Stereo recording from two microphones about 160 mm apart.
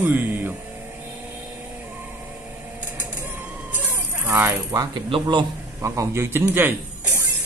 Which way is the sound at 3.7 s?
10° right (ahead or behind).